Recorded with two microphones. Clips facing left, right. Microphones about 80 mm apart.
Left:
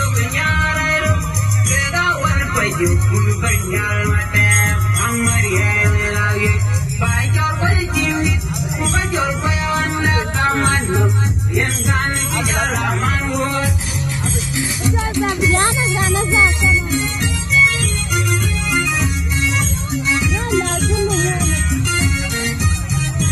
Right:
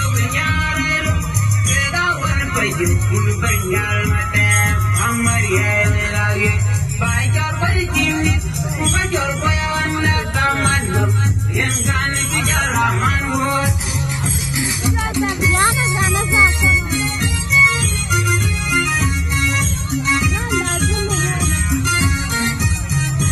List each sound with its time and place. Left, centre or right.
0.4 s music: centre
10.1 s music: left
12.5 s music: centre
18.7 s music: centre